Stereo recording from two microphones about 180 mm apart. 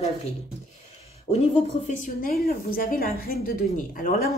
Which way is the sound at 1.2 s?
35° left (ahead or behind).